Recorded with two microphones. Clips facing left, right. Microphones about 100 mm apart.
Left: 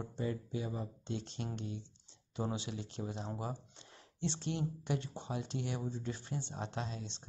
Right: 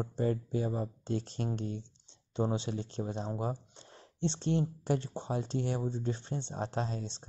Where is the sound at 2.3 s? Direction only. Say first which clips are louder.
Right 6 dB; 30° right (ahead or behind).